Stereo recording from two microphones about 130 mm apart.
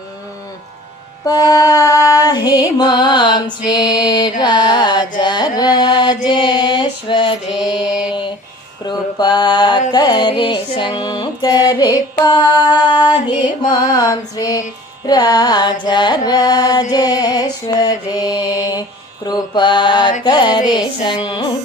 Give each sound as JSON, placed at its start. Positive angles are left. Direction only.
{"t": 1.3, "sound": "female singing", "side_deg": 25}
{"t": 2.7, "sound": "music", "side_deg": 35}
{"t": 5.2, "sound": "mantra", "side_deg": 35}
{"t": 7.5, "sound": "mantra", "side_deg": -5}
{"t": 8.9, "sound": "mantra", "side_deg": 35}
{"t": 9.9, "sound": "music", "side_deg": 30}
{"t": 16.9, "sound": "mantra", "side_deg": 30}
{"t": 20.2, "sound": "music", "side_deg": 35}